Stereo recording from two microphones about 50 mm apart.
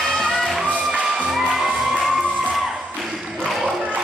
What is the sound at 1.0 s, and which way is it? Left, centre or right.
Music, centre.